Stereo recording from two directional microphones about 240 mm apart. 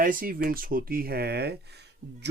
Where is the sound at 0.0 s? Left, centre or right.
Right.